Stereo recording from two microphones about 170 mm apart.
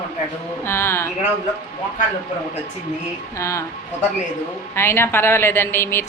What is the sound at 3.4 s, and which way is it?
Speech, 20° left (ahead or behind).